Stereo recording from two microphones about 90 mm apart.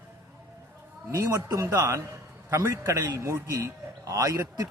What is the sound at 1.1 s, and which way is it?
A man's voice, 40° right (ahead or behind).